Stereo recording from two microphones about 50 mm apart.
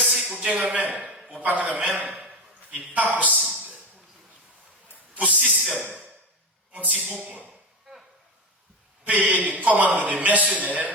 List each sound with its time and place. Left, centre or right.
0.0 s a sound: centre
0.7 s a man's voice: right
5.1 s a man's voice: right
6.7 s speech: right
7.9 s a sound: centre
9.0 s a man's voice: right